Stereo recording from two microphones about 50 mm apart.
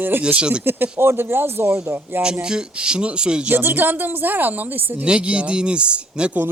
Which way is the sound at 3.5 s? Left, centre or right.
Right.